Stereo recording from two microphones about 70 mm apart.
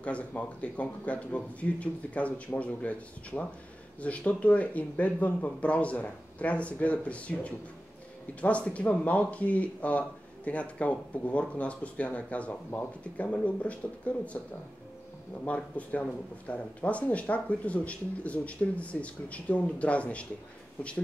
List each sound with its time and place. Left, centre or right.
0.0 s speech: centre